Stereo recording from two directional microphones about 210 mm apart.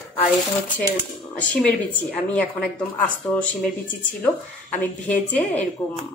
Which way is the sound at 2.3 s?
5° left (ahead or behind).